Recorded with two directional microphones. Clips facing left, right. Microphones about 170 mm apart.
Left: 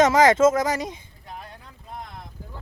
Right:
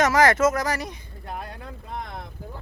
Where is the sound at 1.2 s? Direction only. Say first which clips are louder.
Right 6 dB; 65° right (ahead or behind).